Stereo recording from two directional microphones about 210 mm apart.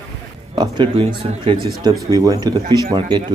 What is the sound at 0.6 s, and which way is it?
A man's voice, 25° right (ahead or behind).